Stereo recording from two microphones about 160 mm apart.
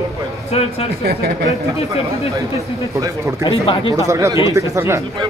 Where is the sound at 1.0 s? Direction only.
75° right (ahead or behind).